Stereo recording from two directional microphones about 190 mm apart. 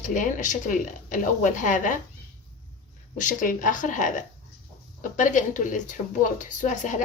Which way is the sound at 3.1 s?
45° left (ahead or behind).